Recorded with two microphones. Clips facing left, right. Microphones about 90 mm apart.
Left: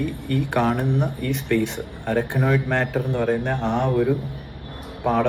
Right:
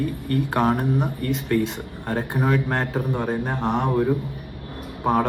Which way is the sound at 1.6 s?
20° right (ahead or behind).